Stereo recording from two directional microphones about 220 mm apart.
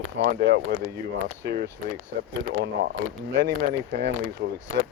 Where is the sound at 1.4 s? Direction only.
45° right (ahead or behind).